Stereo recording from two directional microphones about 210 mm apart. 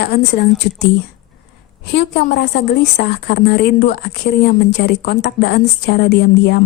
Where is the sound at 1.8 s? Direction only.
50° left (ahead or behind).